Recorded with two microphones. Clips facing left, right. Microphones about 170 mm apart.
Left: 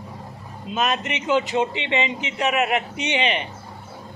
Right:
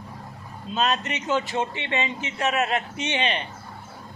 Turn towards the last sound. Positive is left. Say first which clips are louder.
# left 3 dB
turn(degrees=15)  # may be behind; listen again after turning